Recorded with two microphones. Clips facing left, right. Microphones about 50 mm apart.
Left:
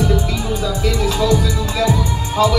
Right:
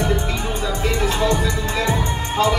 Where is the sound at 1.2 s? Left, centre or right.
Right.